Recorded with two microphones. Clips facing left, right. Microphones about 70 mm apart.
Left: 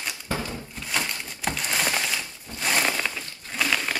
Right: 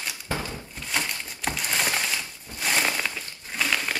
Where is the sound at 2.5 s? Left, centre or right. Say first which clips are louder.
Left 1 dB; centre.